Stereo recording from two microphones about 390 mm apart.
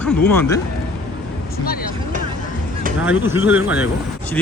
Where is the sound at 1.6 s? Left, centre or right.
Left.